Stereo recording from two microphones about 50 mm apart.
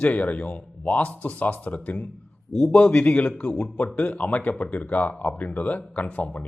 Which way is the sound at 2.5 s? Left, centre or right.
Centre.